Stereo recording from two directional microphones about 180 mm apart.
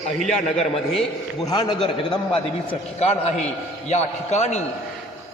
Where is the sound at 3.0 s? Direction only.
35° left (ahead or behind).